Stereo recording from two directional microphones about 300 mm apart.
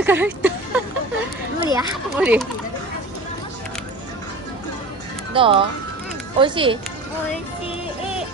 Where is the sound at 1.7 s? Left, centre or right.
Centre.